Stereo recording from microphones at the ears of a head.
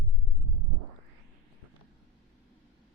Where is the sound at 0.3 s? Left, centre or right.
Right.